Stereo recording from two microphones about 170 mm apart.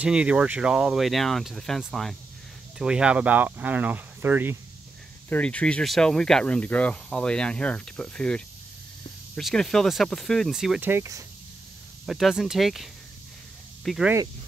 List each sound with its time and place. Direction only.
0.0 s speech: 5° right (ahead or behind)
5.3 s speech: 10° left (ahead or behind)
10.9 s speech: 15° right (ahead or behind)
12.1 s speech: centre (ahead or behind)